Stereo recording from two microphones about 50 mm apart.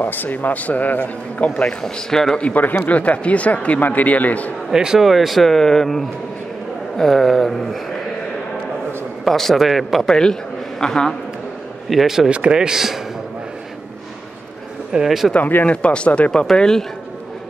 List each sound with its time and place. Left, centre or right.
0.0 s a man's voice: left
1.8 s speech: centre
2.4 s a man's voice: left
4.7 s speech: centre
9.3 s speech: centre
10.8 s speech: centre
11.9 s speech: centre
12.3 s speech: right
15.0 s speech: centre
15.3 s speech: left
16.5 s speech: centre